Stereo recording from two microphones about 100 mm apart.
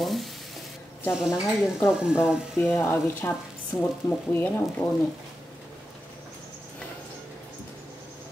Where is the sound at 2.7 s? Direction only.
20° left (ahead or behind).